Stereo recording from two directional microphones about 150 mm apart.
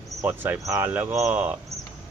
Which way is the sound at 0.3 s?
15° right (ahead or behind).